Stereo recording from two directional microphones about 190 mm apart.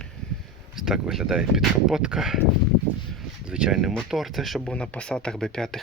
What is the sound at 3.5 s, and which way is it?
Speech, 5° right (ahead or behind).